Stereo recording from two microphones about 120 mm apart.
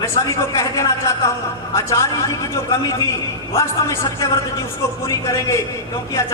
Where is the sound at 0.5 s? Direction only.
25° left (ahead or behind).